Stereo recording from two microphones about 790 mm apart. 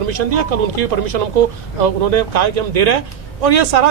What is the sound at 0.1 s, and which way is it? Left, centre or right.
Speech, right.